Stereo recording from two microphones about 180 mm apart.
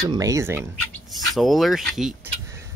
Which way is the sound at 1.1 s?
Centre (ahead or behind).